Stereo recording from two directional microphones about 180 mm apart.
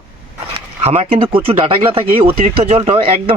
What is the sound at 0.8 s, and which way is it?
Speech, 35° right (ahead or behind).